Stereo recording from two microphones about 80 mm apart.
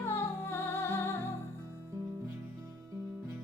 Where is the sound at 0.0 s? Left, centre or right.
Left.